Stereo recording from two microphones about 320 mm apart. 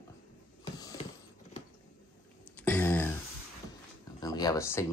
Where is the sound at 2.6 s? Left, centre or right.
Centre.